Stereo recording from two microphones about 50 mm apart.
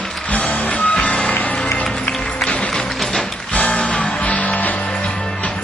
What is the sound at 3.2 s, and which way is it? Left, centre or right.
Music, left.